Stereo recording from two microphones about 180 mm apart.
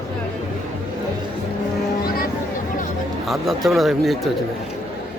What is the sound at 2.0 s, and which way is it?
Music, 55° left (ahead or behind).